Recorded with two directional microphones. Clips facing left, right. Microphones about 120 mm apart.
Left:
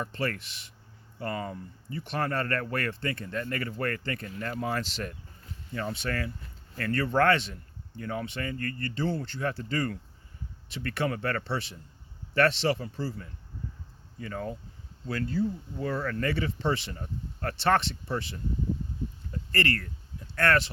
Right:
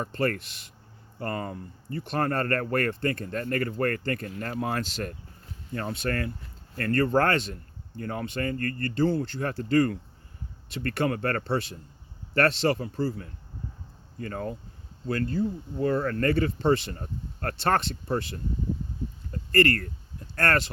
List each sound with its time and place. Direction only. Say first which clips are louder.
0.0 s speech: right 4 dB; 45° right (ahead or behind)
19.3 s a sound: right 7 dB; 45° right (ahead or behind)
20.3 s speech: even; 40° right (ahead or behind)